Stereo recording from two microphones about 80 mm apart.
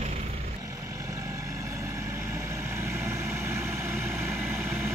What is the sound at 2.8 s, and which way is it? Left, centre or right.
Vehicle, right.